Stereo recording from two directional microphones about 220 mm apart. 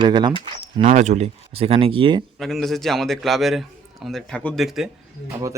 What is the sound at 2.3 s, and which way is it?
A man's voice, centre (ahead or behind).